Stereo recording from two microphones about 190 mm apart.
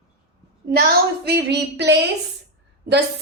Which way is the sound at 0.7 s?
55° right (ahead or behind).